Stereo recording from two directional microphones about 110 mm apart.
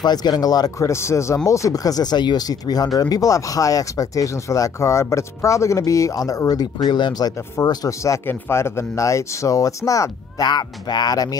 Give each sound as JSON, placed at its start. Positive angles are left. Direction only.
{"t": 0.0, "sound": "speech", "side_deg": 40}